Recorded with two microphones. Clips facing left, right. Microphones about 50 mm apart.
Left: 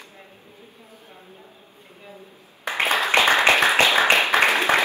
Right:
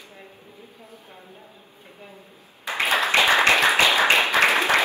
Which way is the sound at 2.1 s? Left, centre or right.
Left.